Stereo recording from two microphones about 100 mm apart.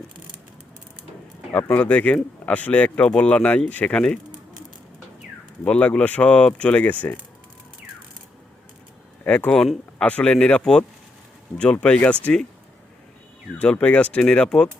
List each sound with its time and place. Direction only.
1.7 s speech: 15° left (ahead or behind)
5.6 s speech: 10° left (ahead or behind)
9.2 s speech: 10° left (ahead or behind)
13.6 s speech: 10° left (ahead or behind)